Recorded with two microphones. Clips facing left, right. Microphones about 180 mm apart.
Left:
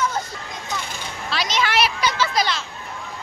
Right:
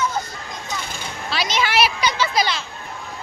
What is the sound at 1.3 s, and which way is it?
Speech, 5° right (ahead or behind).